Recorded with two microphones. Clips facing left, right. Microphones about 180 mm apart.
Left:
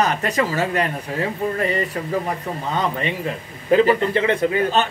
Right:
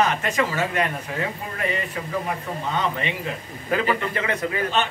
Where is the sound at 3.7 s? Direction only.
30° left (ahead or behind).